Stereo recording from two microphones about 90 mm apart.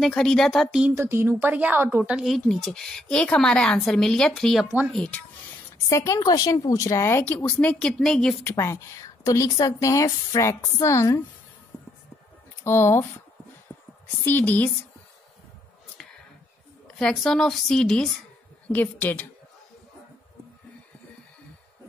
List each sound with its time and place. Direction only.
0.0 s a woman's voice: 10° left (ahead or behind)
0.9 s a woman's voice: 25° right (ahead or behind)
2.2 s a woman's voice: centre (ahead or behind)
5.9 s speech: 40° left (ahead or behind)
7.6 s a woman's voice: 10° left (ahead or behind)
8.5 s speech: 35° left (ahead or behind)
12.6 s a woman's voice: 30° left (ahead or behind)
14.2 s a woman's voice: 20° left (ahead or behind)
16.8 s a woman's voice: 5° left (ahead or behind)
18.7 s a woman's voice: 20° left (ahead or behind)